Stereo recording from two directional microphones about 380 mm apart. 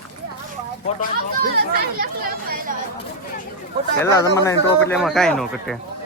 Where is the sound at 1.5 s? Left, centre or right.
Right.